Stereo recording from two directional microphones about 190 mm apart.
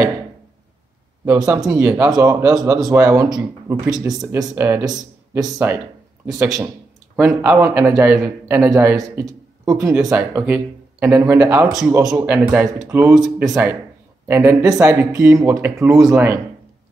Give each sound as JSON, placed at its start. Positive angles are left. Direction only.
{"t": 1.2, "sound": "speech", "side_deg": -15}